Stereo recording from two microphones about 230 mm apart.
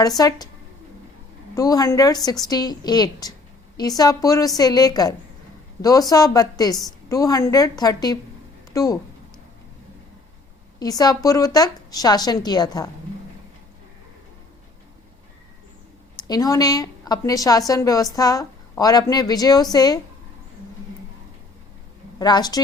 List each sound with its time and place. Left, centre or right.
0.2 s a woman's voice: centre
1.5 s a woman's voice: centre
10.8 s a woman's voice: centre
16.1 s a woman's voice: centre
22.2 s a woman's voice: centre